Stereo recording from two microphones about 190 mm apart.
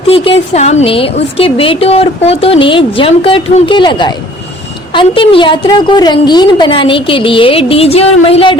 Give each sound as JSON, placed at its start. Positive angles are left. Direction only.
{"t": 0.1, "sound": "a woman's voice", "side_deg": 35}